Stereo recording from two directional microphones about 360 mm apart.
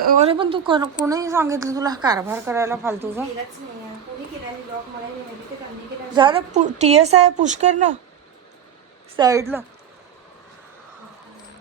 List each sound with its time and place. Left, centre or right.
0.0 s a woman's voice: right
6.1 s a woman's voice: centre
9.1 s a woman's voice: centre